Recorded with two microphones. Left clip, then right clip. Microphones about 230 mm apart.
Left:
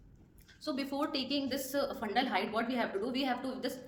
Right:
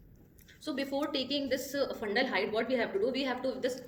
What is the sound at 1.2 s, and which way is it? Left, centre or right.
Speech, left.